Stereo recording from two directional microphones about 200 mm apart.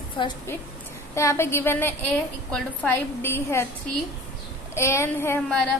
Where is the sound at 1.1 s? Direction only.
15° left (ahead or behind).